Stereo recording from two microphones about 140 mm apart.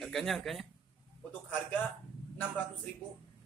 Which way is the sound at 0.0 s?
Centre (ahead or behind).